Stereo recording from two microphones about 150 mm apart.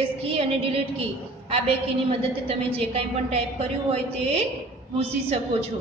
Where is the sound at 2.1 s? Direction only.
40° right (ahead or behind).